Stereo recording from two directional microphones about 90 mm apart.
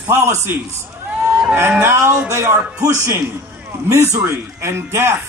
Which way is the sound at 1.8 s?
30° right (ahead or behind).